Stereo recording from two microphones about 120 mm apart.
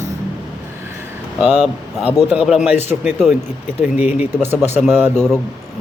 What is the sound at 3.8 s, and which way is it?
Speech, 10° right (ahead or behind).